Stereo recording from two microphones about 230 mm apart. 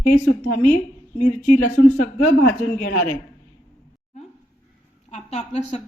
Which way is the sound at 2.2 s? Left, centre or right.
Left.